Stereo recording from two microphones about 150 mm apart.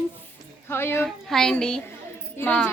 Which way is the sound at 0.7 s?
15° left (ahead or behind).